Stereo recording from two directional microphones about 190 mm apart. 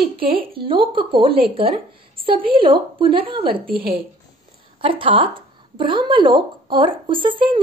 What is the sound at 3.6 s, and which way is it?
Speech, 50° right (ahead or behind).